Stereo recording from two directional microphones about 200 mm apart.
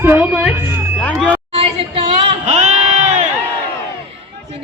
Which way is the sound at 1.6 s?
30° right (ahead or behind).